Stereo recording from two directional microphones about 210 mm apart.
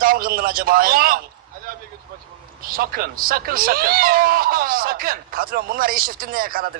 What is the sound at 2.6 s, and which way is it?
Speech, 45° right (ahead or behind).